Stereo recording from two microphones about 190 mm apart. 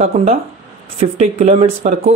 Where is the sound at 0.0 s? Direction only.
30° right (ahead or behind).